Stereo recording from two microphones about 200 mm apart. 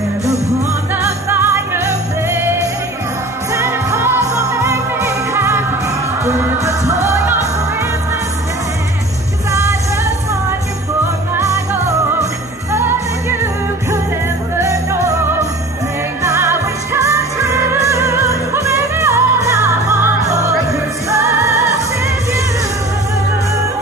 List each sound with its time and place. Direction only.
0.9 s jingle bell: 10° right (ahead or behind)
3.5 s music: 15° right (ahead or behind)
4.6 s jingle bell: 15° right (ahead or behind)
6.2 s music: 15° right (ahead or behind)
9.5 s music: 15° right (ahead or behind)
11.3 s music: 15° right (ahead or behind)
14.6 s music: 15° right (ahead or behind)
16.2 s music: 15° right (ahead or behind)